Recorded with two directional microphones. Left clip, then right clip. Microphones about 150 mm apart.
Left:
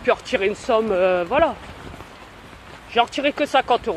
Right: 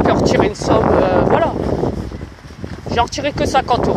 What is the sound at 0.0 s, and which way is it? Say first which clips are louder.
Speech: right 6 dB; centre (ahead or behind).